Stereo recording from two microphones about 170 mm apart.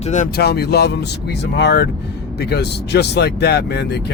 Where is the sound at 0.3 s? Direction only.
70° left (ahead or behind).